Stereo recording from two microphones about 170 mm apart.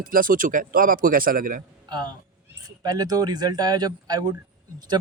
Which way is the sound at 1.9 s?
25° right (ahead or behind).